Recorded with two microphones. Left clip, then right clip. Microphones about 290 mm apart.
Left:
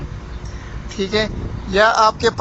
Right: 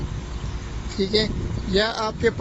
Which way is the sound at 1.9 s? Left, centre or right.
Left.